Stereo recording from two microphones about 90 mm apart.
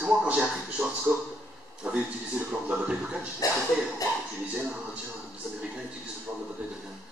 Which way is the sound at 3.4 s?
40° left (ahead or behind).